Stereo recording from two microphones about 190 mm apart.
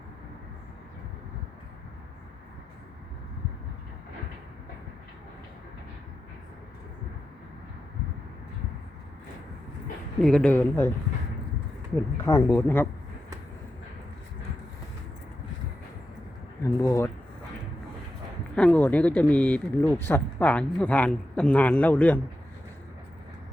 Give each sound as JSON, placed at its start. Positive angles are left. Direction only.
{"t": 10.2, "sound": "speech", "side_deg": 5}
{"t": 12.2, "sound": "speech", "side_deg": 15}
{"t": 16.8, "sound": "speech", "side_deg": 15}
{"t": 18.5, "sound": "speech", "side_deg": 5}